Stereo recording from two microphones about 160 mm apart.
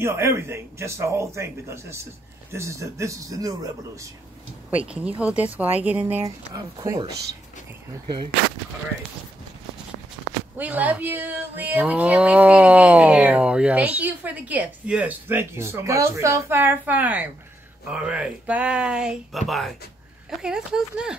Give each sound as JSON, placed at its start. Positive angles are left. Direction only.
{"t": 0.0, "sound": "a man's voice", "side_deg": -15}
{"t": 4.6, "sound": "speech", "side_deg": -10}
{"t": 10.6, "sound": "speech", "side_deg": -10}